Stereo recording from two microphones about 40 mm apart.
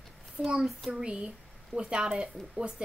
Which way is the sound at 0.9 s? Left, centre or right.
Right.